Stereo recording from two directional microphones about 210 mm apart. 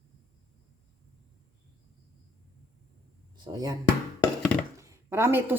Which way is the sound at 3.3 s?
20° right (ahead or behind).